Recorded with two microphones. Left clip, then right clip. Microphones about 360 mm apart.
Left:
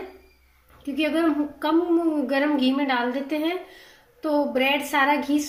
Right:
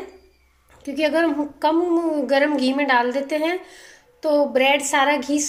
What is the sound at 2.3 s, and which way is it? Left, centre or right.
A woman's voice, centre.